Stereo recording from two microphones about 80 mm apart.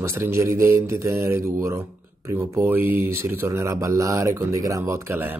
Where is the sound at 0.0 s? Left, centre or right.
Right.